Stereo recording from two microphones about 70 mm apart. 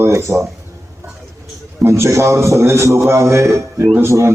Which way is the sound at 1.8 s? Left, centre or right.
Right.